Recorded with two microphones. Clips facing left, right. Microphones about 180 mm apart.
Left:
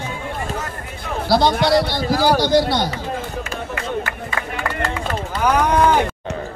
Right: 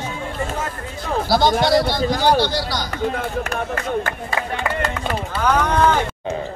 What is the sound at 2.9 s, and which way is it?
Speech, 60° right (ahead or behind).